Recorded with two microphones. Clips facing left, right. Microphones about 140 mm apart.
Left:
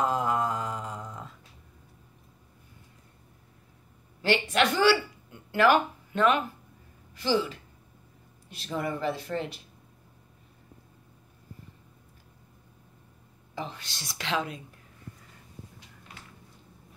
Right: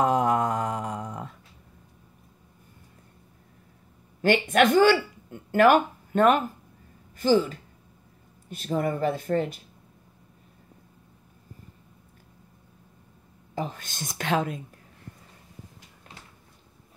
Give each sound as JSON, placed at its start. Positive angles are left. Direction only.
{"t": 0.0, "sound": "mantra", "side_deg": -65}
{"t": 4.2, "sound": "speech", "side_deg": -50}
{"t": 13.6, "sound": "speech", "side_deg": -45}